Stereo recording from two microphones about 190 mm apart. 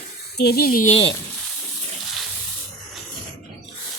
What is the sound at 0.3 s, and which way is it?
Speech, 55° left (ahead or behind).